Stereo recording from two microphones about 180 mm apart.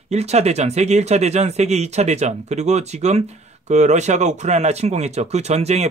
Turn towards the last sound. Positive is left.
turn(degrees=-35)  # may be behind; listen again after turning